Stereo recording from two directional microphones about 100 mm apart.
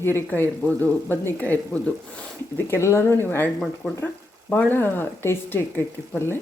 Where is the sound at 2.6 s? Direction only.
25° left (ahead or behind).